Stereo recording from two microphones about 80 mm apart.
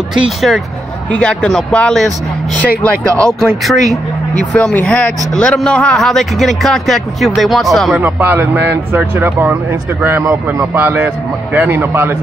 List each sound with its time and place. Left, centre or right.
0.1 s speech: centre
1.1 s speech: centre
3.3 s speech: centre
4.7 s speech: centre
8.0 s speech: right